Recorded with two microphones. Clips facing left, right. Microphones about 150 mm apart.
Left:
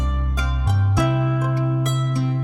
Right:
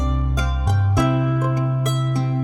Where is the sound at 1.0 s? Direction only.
Centre (ahead or behind).